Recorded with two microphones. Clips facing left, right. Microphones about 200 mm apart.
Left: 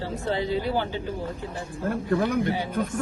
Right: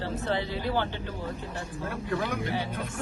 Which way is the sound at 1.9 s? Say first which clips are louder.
Left 7 dB; 50° left (ahead or behind).